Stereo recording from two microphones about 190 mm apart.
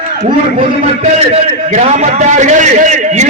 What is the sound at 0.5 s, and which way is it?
A man's voice, 35° right (ahead or behind).